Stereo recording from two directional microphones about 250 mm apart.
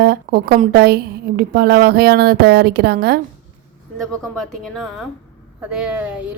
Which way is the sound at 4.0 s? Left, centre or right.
Centre.